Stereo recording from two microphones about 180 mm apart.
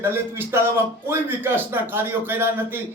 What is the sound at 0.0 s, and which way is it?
A man's voice, 15° right (ahead or behind).